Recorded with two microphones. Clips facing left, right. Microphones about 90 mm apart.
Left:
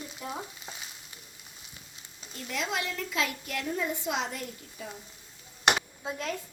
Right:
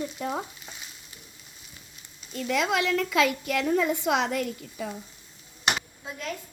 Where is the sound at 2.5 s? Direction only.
90° right.